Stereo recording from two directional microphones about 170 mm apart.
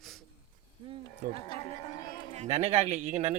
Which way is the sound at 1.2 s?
55° right (ahead or behind).